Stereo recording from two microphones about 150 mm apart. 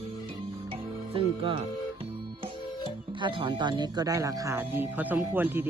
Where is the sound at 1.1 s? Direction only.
35° right (ahead or behind).